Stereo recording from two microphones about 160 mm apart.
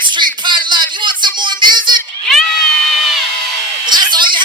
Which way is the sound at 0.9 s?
30° right (ahead or behind).